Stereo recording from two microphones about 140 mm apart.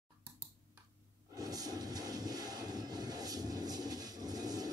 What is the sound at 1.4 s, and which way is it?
Train, 25° right (ahead or behind).